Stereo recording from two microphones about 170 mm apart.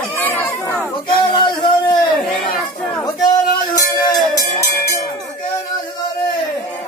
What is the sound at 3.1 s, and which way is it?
Music, 20° left (ahead or behind).